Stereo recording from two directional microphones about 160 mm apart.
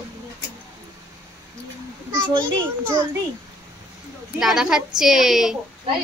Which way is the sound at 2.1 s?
25° right (ahead or behind).